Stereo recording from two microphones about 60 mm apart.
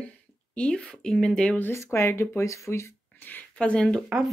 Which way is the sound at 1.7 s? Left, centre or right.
Left.